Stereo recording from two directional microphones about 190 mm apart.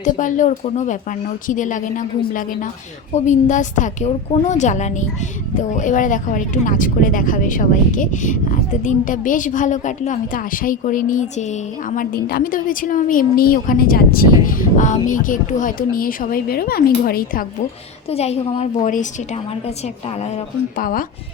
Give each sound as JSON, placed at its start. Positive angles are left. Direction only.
{"t": 0.0, "sound": "a woman's voice", "side_deg": 45}
{"t": 18.1, "sound": "a woman's voice", "side_deg": 35}